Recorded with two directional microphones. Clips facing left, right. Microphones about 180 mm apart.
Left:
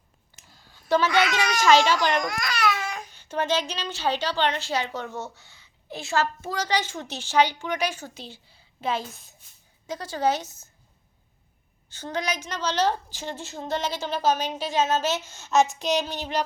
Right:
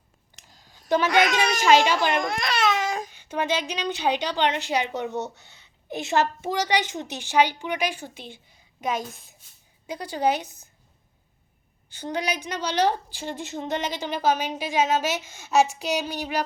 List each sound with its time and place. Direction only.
0.5 s a sound: 45° right (ahead or behind)
0.9 s a child's voice: 15° right (ahead or behind)
1.1 s a child's voice: 45° right (ahead or behind)
1.6 s a woman's voice: 15° right (ahead or behind)
2.2 s babbling: 30° right (ahead or behind)
3.1 s a woman's voice: 10° right (ahead or behind)
8.1 s a woman's voice: 35° left (ahead or behind)
9.8 s a woman's voice: 15° right (ahead or behind)
11.9 s a woman's voice: 15° right (ahead or behind)